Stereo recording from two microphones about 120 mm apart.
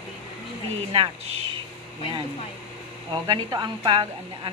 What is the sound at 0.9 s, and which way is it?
Speech, 45° right (ahead or behind).